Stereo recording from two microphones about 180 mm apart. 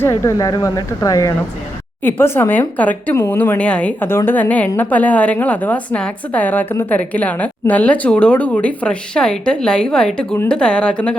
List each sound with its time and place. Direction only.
0.0 s speech: 15° left (ahead or behind)